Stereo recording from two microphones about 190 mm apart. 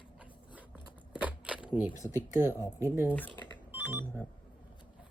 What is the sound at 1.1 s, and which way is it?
Camera, 5° right (ahead or behind).